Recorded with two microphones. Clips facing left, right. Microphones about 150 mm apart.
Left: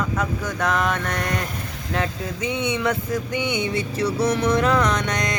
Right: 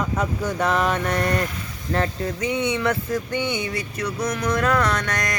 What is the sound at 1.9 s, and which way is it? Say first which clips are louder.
Mantra: right 2 dB; 5° right (ahead or behind).